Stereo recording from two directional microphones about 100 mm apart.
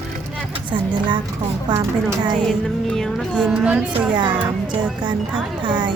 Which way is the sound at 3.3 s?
10° right (ahead or behind).